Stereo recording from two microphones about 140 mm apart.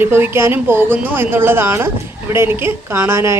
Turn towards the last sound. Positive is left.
turn(degrees=-20)  # may be behind; listen again after turning